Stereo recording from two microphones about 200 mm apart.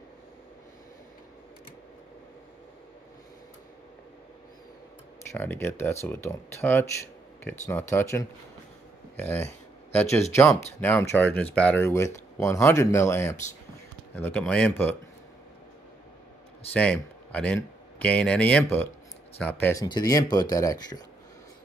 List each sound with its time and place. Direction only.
5.3 s speech: 10° left (ahead or behind)
16.7 s speech: 5° left (ahead or behind)